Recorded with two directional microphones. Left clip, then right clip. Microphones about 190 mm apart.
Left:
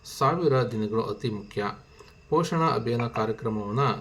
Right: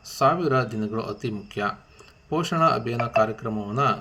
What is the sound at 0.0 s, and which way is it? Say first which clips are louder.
Speech: right 3 dB; 15° right (ahead or behind).